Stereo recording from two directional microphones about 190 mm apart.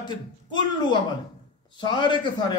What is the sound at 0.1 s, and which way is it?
A man's voice, 25° left (ahead or behind).